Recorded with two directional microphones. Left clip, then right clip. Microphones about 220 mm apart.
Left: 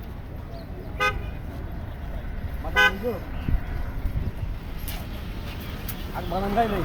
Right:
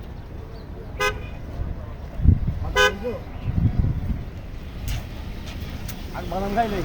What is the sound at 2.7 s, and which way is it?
Speech, 45° right (ahead or behind).